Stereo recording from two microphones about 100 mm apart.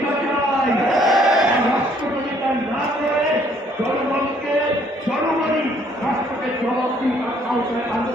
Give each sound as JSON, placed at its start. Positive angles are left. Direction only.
{"t": 0.9, "sound": "battle cry", "side_deg": 0}